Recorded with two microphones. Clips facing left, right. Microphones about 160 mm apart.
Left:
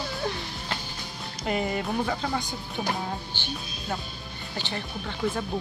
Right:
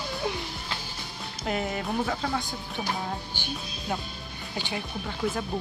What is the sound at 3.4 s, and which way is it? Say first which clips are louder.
Speech: even; 10° right (ahead or behind).